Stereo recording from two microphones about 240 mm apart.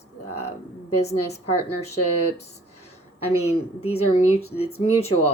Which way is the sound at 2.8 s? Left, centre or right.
Left.